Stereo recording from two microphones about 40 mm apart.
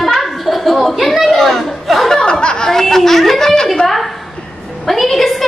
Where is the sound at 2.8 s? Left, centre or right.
Centre.